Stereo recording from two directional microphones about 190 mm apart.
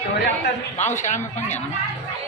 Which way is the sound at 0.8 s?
40° left (ahead or behind).